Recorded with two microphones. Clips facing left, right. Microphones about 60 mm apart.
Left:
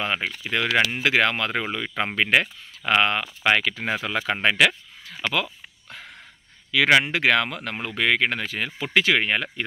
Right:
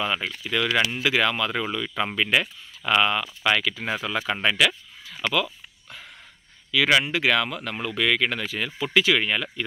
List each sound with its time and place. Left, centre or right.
0.0 s speech: left
4.3 s a sound: left
6.7 s speech: left